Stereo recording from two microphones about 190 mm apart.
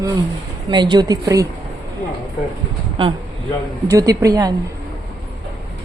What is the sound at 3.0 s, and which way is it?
A woman's voice, 30° right (ahead or behind).